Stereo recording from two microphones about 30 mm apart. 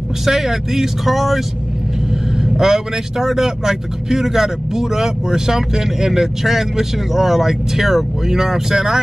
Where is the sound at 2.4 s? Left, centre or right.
Centre.